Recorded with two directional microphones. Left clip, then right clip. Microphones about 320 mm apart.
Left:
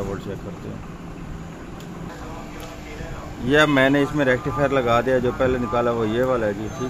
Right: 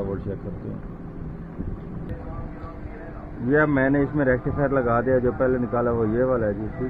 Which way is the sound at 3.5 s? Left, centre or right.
Centre.